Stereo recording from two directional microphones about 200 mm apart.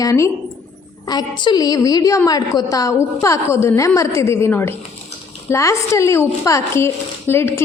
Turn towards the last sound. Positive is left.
turn(degrees=10)  # may be behind; listen again after turning